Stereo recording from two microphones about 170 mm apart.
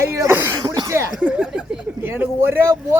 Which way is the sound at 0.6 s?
25° right (ahead or behind).